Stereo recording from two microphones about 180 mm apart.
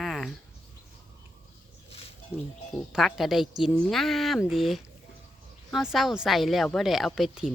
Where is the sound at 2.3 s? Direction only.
35° left (ahead or behind).